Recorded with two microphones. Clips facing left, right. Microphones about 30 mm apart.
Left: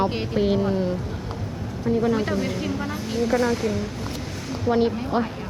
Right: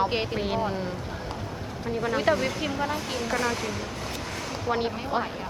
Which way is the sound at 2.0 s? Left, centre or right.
Right.